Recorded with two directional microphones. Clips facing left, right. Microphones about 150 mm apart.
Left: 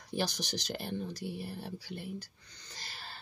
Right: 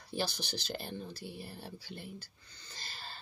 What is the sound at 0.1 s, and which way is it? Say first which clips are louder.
Speech: left 2 dB; 15° left (ahead or behind).